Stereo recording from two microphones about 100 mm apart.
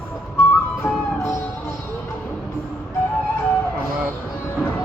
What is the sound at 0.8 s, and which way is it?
Music, 25° left (ahead or behind).